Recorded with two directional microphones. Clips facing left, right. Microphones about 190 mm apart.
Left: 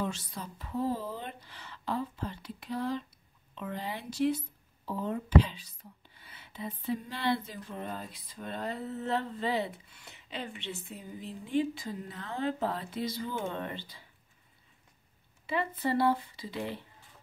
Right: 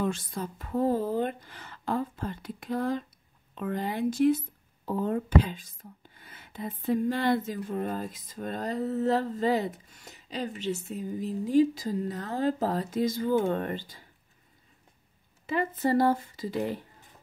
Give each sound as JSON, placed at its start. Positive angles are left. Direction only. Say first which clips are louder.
{"t": 0.0, "sound": "speech", "louder": "right 5 dB", "side_deg": -50}
{"t": 15.4, "sound": "speech", "louder": "right 4 dB", "side_deg": -45}